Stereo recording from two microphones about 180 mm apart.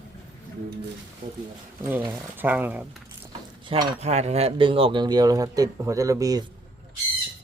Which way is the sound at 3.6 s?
25° right (ahead or behind).